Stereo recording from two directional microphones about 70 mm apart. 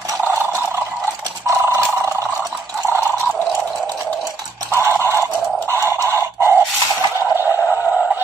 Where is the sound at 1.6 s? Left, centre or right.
Right.